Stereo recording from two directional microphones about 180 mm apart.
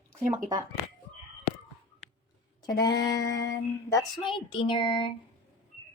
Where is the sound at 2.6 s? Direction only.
20° left (ahead or behind).